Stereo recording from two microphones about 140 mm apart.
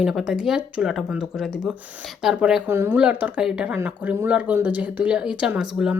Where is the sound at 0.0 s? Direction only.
5° right (ahead or behind).